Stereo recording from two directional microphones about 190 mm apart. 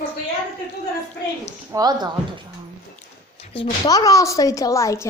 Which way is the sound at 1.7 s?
20° right (ahead or behind).